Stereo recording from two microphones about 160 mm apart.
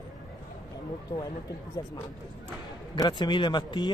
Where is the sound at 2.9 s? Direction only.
25° left (ahead or behind).